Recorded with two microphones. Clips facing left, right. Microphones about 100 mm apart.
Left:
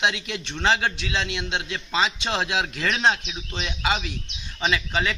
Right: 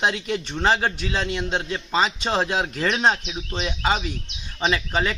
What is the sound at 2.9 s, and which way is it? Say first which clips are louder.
Speech: right 1 dB; 10° right (ahead or behind).